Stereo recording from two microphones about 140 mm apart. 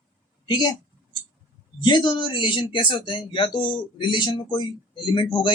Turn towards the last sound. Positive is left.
turn(degrees=35)  # may be behind; listen again after turning